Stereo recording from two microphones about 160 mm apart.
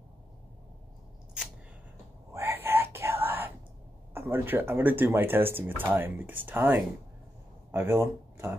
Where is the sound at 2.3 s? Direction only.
15° right (ahead or behind).